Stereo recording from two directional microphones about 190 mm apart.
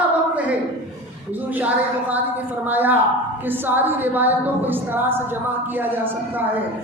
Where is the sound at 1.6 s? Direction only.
10° right (ahead or behind).